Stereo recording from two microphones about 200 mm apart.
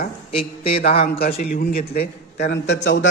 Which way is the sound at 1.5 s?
45° left (ahead or behind).